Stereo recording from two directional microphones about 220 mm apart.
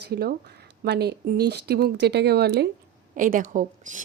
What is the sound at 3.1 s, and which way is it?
Speech, 35° right (ahead or behind).